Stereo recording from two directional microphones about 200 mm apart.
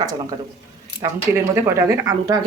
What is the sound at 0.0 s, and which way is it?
A woman's voice, 20° right (ahead or behind).